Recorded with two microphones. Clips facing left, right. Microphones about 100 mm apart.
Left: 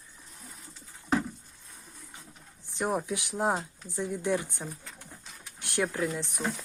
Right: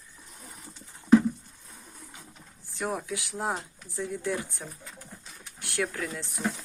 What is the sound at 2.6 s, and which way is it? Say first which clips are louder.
Speech: left 2 dB; 20° left (ahead or behind).